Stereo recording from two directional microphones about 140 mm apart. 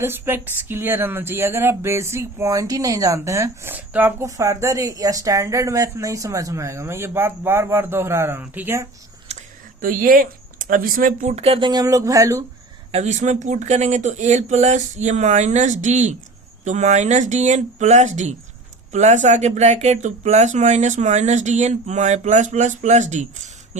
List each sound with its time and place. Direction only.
0.0 s speech: 15° right (ahead or behind)
9.8 s speech: 75° right (ahead or behind)
11.3 s speech: 45° right (ahead or behind)
11.7 s speech: 25° right (ahead or behind)
12.9 s speech: 55° right (ahead or behind)